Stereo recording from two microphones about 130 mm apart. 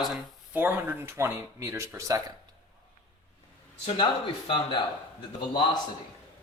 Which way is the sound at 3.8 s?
40° left (ahead or behind).